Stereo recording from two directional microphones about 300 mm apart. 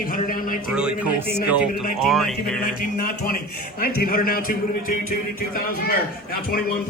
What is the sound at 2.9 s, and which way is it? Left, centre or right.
Speech, left.